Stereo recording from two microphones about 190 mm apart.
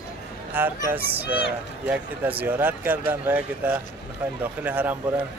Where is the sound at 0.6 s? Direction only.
10° right (ahead or behind).